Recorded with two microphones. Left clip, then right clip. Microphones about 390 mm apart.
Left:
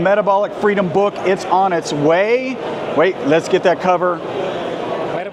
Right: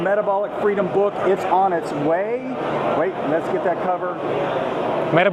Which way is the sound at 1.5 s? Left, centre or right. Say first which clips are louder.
Left 3 dB; left.